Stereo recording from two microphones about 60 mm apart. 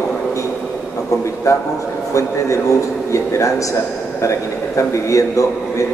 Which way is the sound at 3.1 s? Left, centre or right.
Left.